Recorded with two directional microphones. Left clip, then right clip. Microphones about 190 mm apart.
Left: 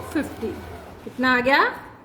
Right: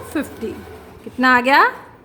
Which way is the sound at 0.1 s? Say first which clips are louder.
Right 2 dB; 20° right (ahead or behind).